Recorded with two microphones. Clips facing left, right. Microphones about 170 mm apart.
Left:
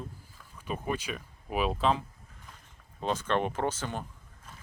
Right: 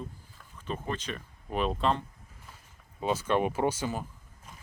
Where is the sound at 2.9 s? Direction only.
10° right (ahead or behind).